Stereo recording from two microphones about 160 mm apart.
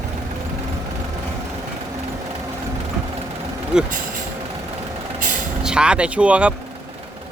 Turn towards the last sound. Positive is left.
turn(degrees=-10)  # may be behind; listen again after turning